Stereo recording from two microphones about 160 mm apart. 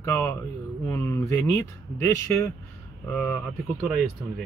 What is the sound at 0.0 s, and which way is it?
Speech, 15° left (ahead or behind).